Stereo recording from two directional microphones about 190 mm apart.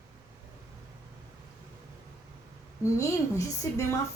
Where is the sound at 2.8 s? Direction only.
15° left (ahead or behind).